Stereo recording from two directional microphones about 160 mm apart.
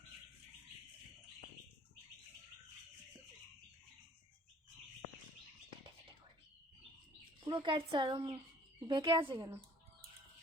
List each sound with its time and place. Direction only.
7.4 s speech: 30° right (ahead or behind)